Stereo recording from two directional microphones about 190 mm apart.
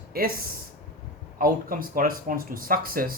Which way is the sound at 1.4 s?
50° right (ahead or behind).